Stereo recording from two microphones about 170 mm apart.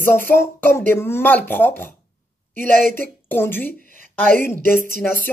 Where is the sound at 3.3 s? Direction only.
10° left (ahead or behind).